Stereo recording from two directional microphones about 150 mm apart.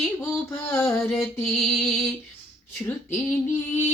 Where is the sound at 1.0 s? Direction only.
Centre (ahead or behind).